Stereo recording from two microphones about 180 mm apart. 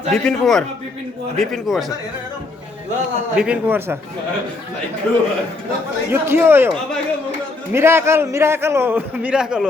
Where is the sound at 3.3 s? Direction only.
5° right (ahead or behind).